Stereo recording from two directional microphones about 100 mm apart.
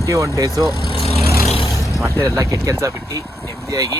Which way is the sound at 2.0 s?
30° right (ahead or behind).